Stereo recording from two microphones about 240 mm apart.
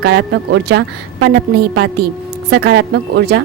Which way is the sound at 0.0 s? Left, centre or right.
Right.